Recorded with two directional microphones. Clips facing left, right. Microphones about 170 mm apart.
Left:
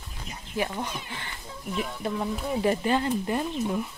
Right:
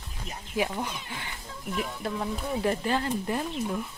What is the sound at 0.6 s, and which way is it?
Speech, 10° right (ahead or behind).